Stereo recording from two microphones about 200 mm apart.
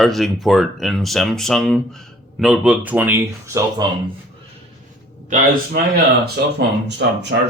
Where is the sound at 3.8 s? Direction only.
20° right (ahead or behind).